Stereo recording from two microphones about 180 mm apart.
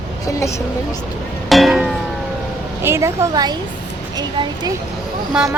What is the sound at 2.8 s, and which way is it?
Speech, 15° right (ahead or behind).